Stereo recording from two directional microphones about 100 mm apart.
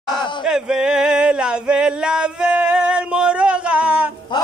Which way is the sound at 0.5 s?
10° right (ahead or behind).